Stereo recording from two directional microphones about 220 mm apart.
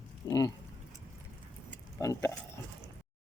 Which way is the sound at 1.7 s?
15° left (ahead or behind).